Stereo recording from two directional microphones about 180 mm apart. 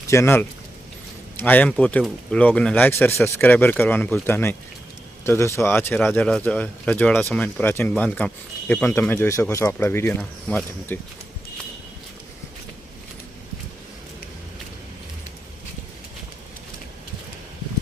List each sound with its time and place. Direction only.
0.1 s speech: 15° left (ahead or behind)